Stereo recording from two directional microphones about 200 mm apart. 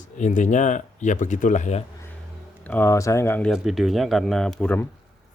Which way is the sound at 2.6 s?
10° left (ahead or behind).